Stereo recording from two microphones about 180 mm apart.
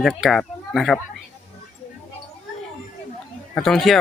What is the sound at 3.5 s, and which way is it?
Speech, centre (ahead or behind).